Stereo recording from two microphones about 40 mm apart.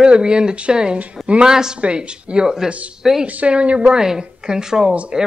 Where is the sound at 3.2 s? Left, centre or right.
Right.